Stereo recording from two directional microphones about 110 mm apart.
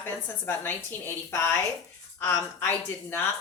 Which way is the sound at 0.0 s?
20° left (ahead or behind).